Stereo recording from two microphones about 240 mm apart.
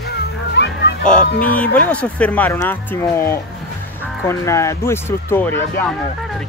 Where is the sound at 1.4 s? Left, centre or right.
Centre.